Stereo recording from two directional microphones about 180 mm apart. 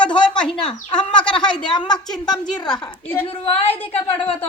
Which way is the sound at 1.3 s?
25° left (ahead or behind).